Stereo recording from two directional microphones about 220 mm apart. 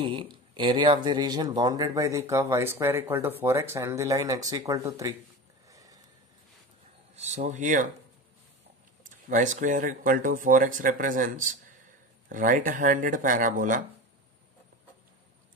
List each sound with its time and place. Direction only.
0.0 s speech: 20° right (ahead or behind)
5.7 s a sound: 15° right (ahead or behind)
7.2 s speech: 30° right (ahead or behind)
9.0 s speech: 35° right (ahead or behind)